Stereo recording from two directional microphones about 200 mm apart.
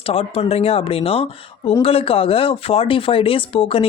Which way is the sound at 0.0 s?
30° left (ahead or behind).